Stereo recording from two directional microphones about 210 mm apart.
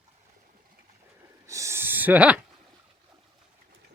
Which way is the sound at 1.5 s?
15° right (ahead or behind).